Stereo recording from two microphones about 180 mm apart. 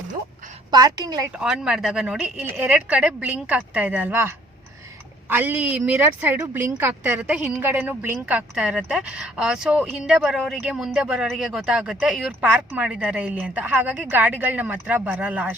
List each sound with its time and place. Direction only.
0.7 s a woman's voice: 20° right (ahead or behind)
1.4 s speech: 5° right (ahead or behind)